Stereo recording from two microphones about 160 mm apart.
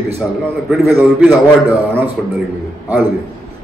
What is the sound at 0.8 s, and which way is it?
Speech, 15° right (ahead or behind).